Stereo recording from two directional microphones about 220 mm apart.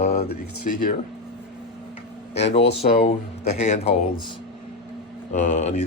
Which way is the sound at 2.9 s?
40° left (ahead or behind).